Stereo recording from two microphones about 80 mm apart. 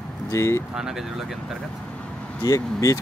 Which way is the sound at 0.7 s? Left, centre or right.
Centre.